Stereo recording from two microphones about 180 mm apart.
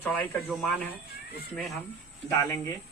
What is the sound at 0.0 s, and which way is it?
Speech, 10° left (ahead or behind).